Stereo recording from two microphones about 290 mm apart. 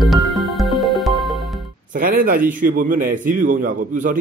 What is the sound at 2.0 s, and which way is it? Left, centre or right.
A man's voice, right.